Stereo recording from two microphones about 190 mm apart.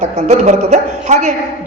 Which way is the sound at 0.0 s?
40° right (ahead or behind).